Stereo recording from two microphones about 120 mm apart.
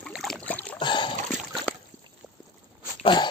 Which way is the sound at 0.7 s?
40° left (ahead or behind).